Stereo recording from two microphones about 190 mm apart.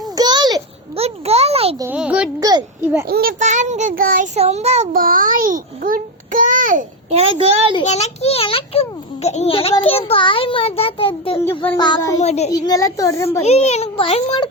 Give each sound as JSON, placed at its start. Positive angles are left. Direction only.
{"t": 0.2, "sound": "a sound", "side_deg": -20}
{"t": 1.0, "sound": "a sound", "side_deg": -30}
{"t": 1.8, "sound": "a child's voice", "side_deg": -10}
{"t": 2.4, "sound": "a child's voice", "side_deg": -20}
{"t": 3.1, "sound": "a child's voice", "side_deg": -50}
{"t": 4.4, "sound": "child singing", "side_deg": -35}
{"t": 4.9, "sound": "a child's voice", "side_deg": -50}
{"t": 7.9, "sound": "a child's voice", "side_deg": 35}
{"t": 12.2, "sound": "a child's voice", "side_deg": 35}
{"t": 12.5, "sound": "a child's voice", "side_deg": 20}
{"t": 13.4, "sound": "a child's voice", "side_deg": 35}